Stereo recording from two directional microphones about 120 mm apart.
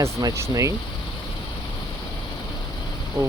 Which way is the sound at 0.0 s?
25° right (ahead or behind).